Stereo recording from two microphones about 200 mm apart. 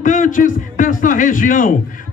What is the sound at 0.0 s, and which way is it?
A man's voice, 40° left (ahead or behind).